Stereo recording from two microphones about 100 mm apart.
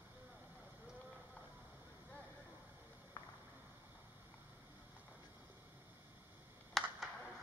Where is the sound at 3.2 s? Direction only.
35° left (ahead or behind).